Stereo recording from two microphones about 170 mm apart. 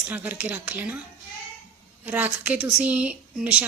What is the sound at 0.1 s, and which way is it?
Speech, 10° right (ahead or behind).